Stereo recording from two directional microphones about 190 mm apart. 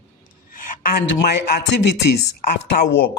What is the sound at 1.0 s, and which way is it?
Speech, 55° left (ahead or behind).